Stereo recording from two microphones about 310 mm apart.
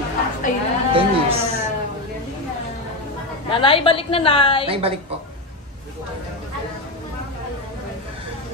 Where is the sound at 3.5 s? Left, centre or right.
Centre.